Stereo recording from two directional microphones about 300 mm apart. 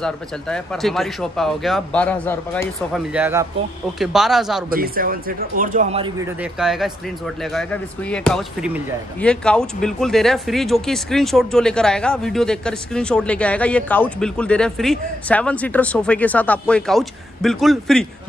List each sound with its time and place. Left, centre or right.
0.0 s speech: centre
4.6 s speech: right
6.4 s speech: centre